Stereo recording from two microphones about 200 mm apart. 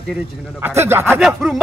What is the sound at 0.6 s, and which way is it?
Speech, 10° right (ahead or behind).